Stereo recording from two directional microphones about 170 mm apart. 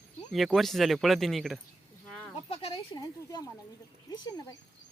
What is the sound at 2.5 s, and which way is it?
Speech, 35° left (ahead or behind).